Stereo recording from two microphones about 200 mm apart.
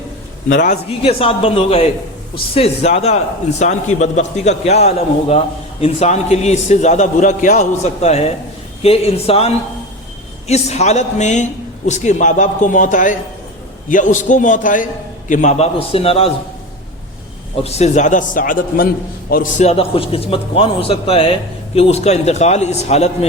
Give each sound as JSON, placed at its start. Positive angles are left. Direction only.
{"t": 0.4, "sound": "a man's voice", "side_deg": 40}
{"t": 17.6, "sound": "a man's voice", "side_deg": 30}